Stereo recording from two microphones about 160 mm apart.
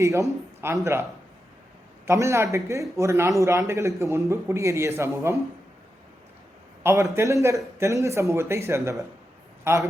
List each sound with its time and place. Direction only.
0.0 s speech: 20° right (ahead or behind)
2.0 s a man's voice: 20° right (ahead or behind)
6.8 s a man's voice: 15° right (ahead or behind)